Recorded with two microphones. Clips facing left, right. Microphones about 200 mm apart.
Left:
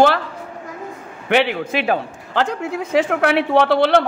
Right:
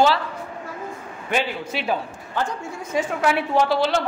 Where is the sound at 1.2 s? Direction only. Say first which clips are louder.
Left 7 dB; 70° left (ahead or behind).